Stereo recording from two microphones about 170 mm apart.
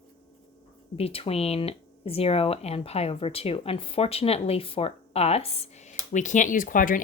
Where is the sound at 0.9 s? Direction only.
35° left (ahead or behind).